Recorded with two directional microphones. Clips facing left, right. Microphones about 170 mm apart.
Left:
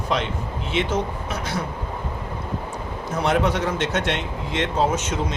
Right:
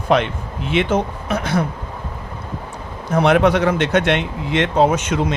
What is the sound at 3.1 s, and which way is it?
Speech, 70° right (ahead or behind).